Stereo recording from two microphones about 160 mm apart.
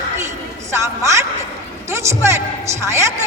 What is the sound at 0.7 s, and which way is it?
A woman's voice, 15° right (ahead or behind).